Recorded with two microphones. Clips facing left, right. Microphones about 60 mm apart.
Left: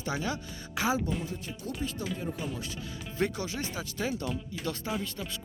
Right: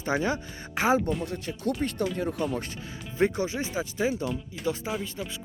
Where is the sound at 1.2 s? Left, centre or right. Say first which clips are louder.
Right 7 dB; right.